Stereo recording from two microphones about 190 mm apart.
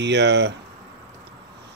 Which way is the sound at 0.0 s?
65° right (ahead or behind).